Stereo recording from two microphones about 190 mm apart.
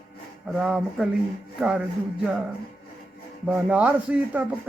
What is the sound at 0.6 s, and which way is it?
Speech, centre (ahead or behind).